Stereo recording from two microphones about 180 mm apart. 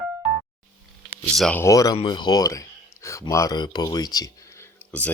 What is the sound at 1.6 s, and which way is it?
Speech, 20° left (ahead or behind).